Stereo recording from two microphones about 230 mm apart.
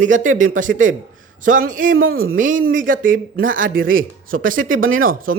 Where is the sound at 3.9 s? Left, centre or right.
Right.